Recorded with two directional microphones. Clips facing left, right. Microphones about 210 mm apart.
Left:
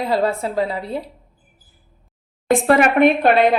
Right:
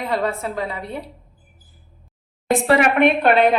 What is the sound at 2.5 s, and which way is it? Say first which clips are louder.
Speech: left 2 dB; 50° left (ahead or behind).